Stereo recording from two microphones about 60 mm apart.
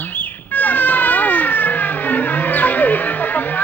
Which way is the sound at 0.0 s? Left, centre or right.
Left.